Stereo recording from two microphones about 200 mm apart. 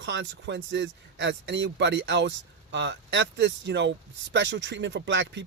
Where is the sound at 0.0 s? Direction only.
65° right (ahead or behind).